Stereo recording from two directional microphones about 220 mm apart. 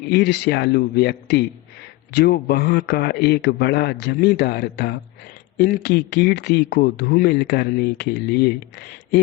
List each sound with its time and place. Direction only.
0.1 s speech: 50° left (ahead or behind)